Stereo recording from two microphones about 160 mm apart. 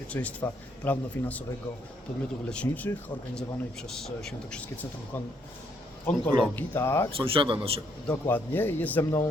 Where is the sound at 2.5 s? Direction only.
10° left (ahead or behind).